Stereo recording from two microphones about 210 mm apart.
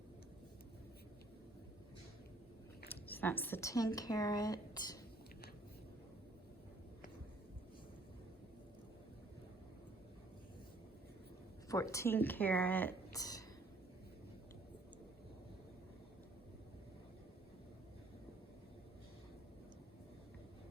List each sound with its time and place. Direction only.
2.9 s speech: 10° left (ahead or behind)
11.7 s speech: 15° left (ahead or behind)